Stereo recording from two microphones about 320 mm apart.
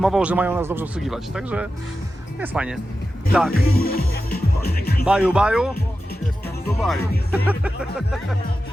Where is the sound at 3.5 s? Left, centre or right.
Left.